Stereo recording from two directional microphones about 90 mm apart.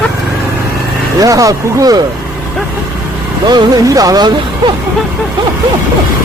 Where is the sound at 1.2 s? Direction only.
40° right (ahead or behind).